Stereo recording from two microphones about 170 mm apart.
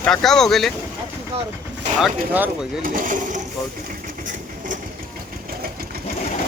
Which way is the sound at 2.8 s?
50° right (ahead or behind).